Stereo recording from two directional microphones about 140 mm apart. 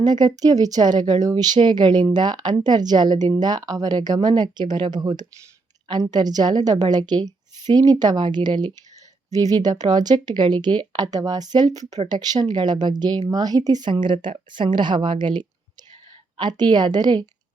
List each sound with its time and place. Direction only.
0.0 s speech: 30° right (ahead or behind)